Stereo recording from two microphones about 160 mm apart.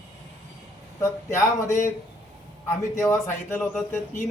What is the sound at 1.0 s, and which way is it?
Speech, 15° left (ahead or behind).